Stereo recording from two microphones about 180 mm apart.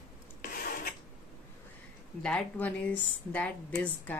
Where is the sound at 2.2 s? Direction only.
5° left (ahead or behind).